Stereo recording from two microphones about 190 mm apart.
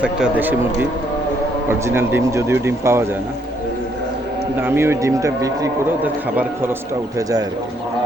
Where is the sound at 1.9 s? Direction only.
15° right (ahead or behind).